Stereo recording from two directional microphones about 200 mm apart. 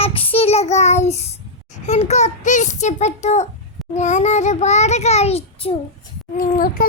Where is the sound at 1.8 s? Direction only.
35° left (ahead or behind).